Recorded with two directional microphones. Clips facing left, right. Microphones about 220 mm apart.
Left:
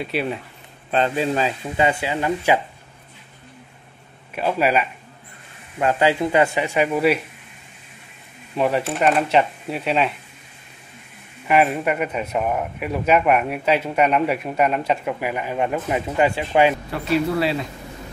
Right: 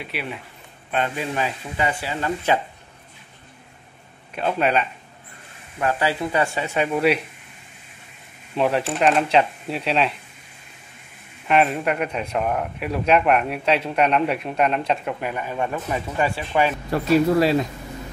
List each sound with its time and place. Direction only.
0.0 s speech: 35° left (ahead or behind); by 2.6 s 10° left (ahead or behind)
4.4 s speech: 5° left (ahead or behind)
5.8 s speech: 20° left (ahead or behind); by 7.2 s centre (ahead or behind)
8.5 s speech: centre (ahead or behind)
11.4 s speech: 5° left (ahead or behind)
16.9 s speech: 40° right (ahead or behind)